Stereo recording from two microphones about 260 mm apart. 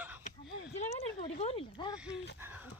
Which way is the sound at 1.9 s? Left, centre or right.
Centre.